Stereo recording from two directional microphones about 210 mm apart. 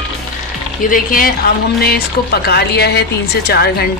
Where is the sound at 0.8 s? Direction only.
40° left (ahead or behind).